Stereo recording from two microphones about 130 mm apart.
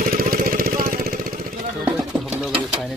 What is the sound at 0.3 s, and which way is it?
Vehicle, 90° right.